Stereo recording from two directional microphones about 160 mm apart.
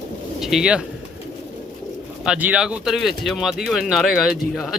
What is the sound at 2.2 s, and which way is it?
Speech, 5° right (ahead or behind).